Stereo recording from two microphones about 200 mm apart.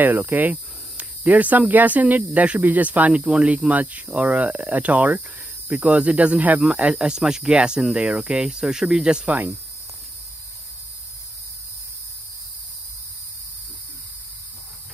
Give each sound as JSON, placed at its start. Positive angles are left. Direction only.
{"t": 0.0, "sound": "speech", "side_deg": -10}